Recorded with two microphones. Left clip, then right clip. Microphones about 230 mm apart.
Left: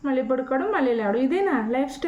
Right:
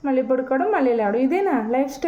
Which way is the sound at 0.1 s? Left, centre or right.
Centre.